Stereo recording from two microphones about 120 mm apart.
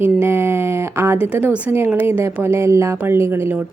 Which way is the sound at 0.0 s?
20° right (ahead or behind).